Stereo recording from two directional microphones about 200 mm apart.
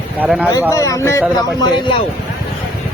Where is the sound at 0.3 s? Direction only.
5° right (ahead or behind).